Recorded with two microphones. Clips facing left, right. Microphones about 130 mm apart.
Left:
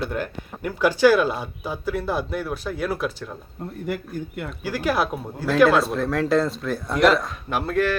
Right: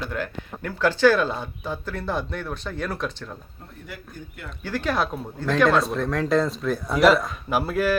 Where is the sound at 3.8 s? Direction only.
60° left (ahead or behind).